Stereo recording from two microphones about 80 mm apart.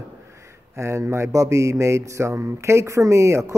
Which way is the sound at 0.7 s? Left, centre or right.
Right.